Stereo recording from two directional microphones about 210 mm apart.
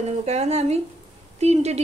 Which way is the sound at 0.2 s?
30° right (ahead or behind).